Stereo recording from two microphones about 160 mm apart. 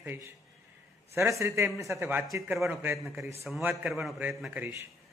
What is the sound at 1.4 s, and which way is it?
Speech, 15° right (ahead or behind).